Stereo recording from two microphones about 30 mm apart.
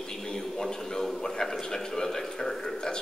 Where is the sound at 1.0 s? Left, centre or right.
Centre.